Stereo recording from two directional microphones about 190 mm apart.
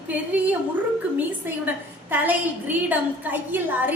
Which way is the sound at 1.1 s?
10° right (ahead or behind).